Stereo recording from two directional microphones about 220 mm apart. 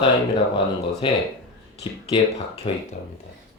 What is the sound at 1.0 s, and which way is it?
Speech, 25° left (ahead or behind).